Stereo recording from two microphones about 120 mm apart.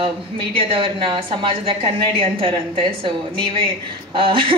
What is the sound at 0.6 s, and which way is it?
A woman's voice, 50° right (ahead or behind).